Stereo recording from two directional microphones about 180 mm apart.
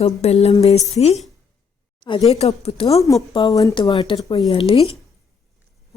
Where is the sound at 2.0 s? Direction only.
20° left (ahead or behind).